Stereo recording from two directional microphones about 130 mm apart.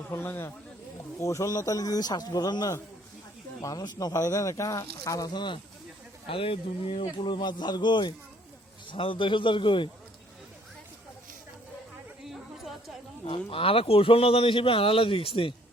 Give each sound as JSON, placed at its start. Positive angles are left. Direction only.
{"t": 0.1, "sound": "a man's voice", "side_deg": 20}
{"t": 7.3, "sound": "a man's voice", "side_deg": 35}
{"t": 12.2, "sound": "chatter", "side_deg": 0}
{"t": 13.2, "sound": "a man's voice", "side_deg": 45}